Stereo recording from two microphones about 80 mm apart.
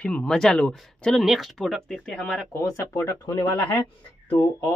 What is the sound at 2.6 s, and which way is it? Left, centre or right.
Speech, left.